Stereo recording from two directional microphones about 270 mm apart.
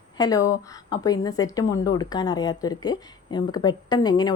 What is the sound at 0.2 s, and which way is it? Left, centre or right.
A woman's voice, centre.